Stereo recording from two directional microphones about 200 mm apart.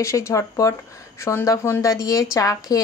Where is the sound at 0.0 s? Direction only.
15° left (ahead or behind).